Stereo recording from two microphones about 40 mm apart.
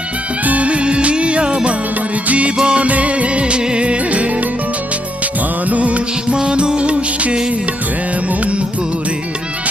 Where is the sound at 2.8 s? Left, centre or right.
Right.